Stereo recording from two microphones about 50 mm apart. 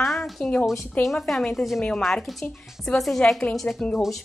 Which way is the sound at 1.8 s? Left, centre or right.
Centre.